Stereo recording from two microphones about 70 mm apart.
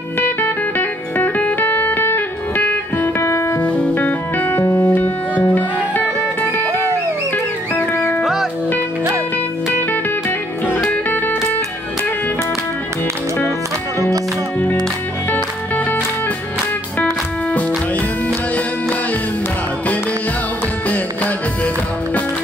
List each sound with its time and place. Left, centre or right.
0.2 s music: left
3.0 s music: left
3.6 s music: centre
7.7 s music: left
10.9 s music: left
15.3 s music: left
17.0 s music: left